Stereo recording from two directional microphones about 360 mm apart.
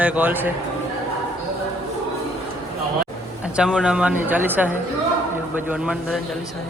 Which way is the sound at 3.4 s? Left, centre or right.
Centre.